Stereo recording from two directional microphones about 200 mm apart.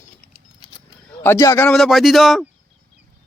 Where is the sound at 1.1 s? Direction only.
10° left (ahead or behind).